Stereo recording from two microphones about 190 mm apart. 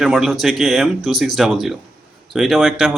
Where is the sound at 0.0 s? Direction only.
Centre (ahead or behind).